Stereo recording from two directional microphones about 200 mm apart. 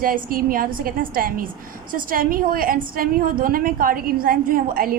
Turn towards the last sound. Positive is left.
turn(degrees=-45)  # may be behind; listen again after turning